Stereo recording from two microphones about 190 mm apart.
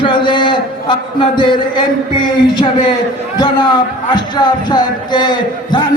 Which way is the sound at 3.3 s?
20° left (ahead or behind).